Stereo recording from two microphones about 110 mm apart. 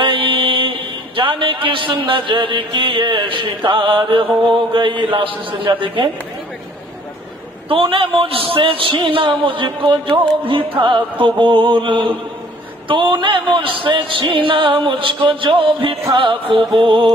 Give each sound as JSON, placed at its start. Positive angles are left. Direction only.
{"t": 0.0, "sound": "a man's voice", "side_deg": -50}
{"t": 7.7, "sound": "a man's voice", "side_deg": -55}